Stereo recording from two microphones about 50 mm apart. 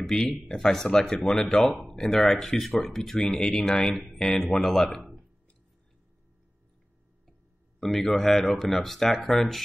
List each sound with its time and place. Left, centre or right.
0.0 s speech: centre
7.8 s speech: centre